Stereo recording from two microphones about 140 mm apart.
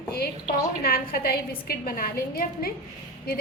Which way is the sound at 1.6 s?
90° left.